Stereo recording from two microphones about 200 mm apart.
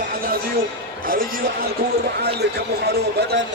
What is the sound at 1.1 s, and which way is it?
A man's voice, 45° right (ahead or behind).